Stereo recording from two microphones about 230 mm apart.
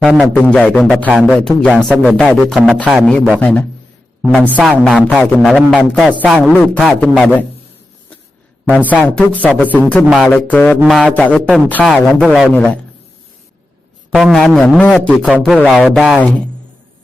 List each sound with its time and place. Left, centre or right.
0.0 s a man's voice: centre
8.6 s a woman's voice: centre
9.0 s a man's voice: centre
9.6 s a woman's voice: centre
14.1 s a man's voice: centre